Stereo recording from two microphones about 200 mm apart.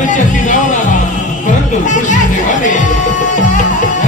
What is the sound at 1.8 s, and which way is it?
Music, 40° left (ahead or behind).